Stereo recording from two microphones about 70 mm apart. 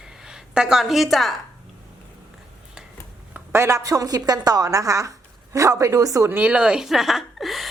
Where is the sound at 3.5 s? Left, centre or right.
Right.